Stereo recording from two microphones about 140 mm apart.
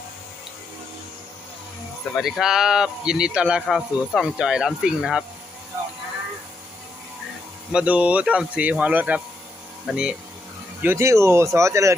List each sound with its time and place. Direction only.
2.1 s speech: centre (ahead or behind)
7.7 s speech: 5° right (ahead or behind)
10.8 s speech: 20° right (ahead or behind)